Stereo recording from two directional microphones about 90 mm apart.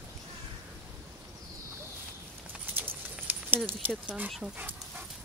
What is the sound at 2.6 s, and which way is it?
Clip-clop, 20° right (ahead or behind).